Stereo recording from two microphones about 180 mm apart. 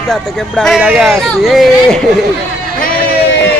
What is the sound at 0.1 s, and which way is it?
Speech, 5° left (ahead or behind).